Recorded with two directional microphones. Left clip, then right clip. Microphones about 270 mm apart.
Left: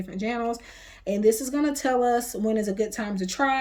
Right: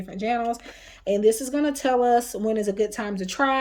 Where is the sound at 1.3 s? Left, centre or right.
Right.